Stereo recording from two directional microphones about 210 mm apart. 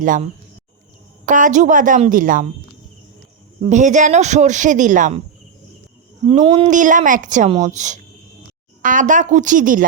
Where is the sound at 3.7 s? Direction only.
35° right (ahead or behind).